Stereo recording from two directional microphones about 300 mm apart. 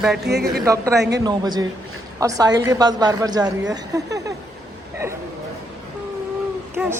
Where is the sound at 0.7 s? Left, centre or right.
Centre.